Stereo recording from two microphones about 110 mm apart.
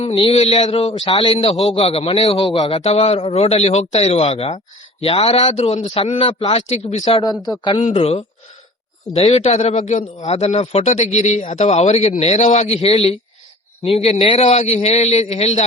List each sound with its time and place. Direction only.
0.3 s speech: 70° left (ahead or behind)
1.0 s a man's voice: 50° left (ahead or behind)
2.8 s speech: 70° left (ahead or behind)
5.5 s speech: 90° left; by 7.2 s 65° left (ahead or behind)
7.2 s speech: 35° left (ahead or behind)
7.9 s a man's voice: 60° left (ahead or behind); by 15.6 s 80° left